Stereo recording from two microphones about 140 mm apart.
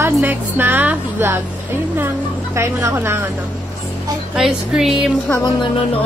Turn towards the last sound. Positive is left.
turn(degrees=-5)  # may be behind; listen again after turning